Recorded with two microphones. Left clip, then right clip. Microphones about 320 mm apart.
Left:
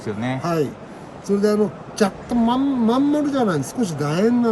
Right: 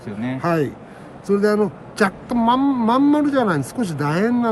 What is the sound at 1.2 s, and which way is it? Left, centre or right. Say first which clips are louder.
Speech: right 1 dB; centre.